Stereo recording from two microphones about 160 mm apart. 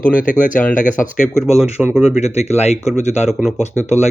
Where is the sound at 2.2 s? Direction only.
45° left (ahead or behind).